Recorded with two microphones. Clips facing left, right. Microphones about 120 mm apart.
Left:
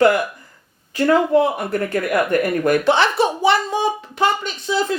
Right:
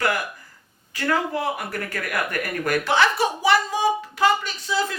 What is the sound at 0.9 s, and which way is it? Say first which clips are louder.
A woman's voice: left 9 dB; 25° left (ahead or behind).